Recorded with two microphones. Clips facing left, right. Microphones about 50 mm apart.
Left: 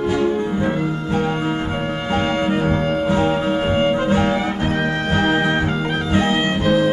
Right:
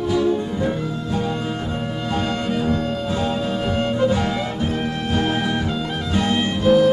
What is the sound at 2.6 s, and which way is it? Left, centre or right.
Music, left.